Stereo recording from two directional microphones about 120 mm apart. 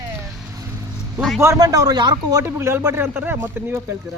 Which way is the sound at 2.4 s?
25° right (ahead or behind).